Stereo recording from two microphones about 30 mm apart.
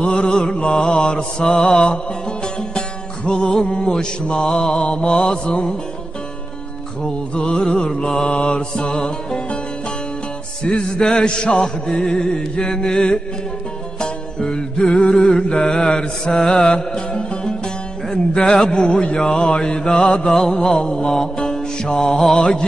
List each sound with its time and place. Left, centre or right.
0.0 s music: left
7.3 s music: left
10.7 s music: left
15.6 s music: left
20.3 s music: left